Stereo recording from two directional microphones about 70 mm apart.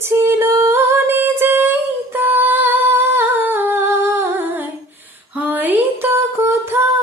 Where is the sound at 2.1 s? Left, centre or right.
Right.